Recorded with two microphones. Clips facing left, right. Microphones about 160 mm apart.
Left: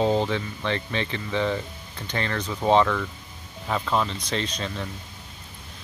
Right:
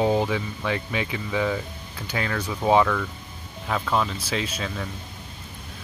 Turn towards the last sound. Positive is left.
turn(degrees=-5)  # may be behind; listen again after turning